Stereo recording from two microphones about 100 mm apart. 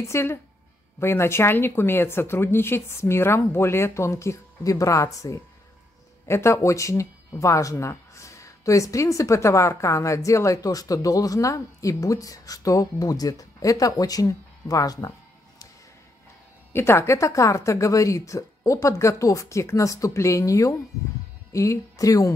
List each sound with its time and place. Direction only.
0.0 s speech: 25° left (ahead or behind)
16.7 s speech: 25° left (ahead or behind)